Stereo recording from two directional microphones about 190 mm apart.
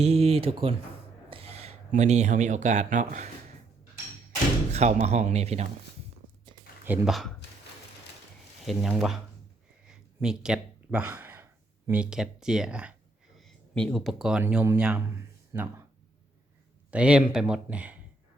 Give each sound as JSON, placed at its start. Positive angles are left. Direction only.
{"t": 0.0, "sound": "speech", "side_deg": -35}
{"t": 4.7, "sound": "speech", "side_deg": -35}
{"t": 6.8, "sound": "speech", "side_deg": -5}
{"t": 8.6, "sound": "speech", "side_deg": 0}
{"t": 9.8, "sound": "gasp", "side_deg": -5}
{"t": 11.9, "sound": "speech", "side_deg": -5}
{"t": 16.9, "sound": "speech", "side_deg": -5}